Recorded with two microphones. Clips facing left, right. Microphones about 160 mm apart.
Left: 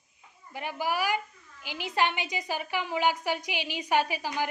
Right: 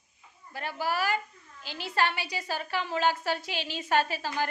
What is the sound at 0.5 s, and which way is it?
A woman's voice, 15° left (ahead or behind).